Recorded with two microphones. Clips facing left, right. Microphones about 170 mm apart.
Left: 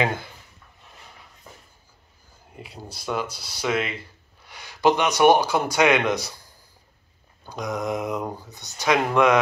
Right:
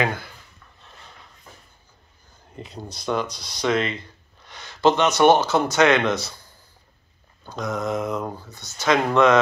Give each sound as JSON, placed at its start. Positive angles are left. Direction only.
{"t": 0.0, "sound": "speech", "side_deg": 25}
{"t": 2.5, "sound": "speech", "side_deg": 10}
{"t": 7.4, "sound": "speech", "side_deg": 15}